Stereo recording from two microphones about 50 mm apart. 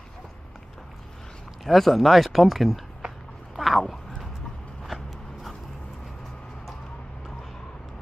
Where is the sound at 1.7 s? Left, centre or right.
Centre.